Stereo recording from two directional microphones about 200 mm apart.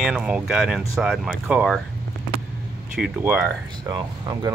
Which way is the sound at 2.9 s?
5° right (ahead or behind).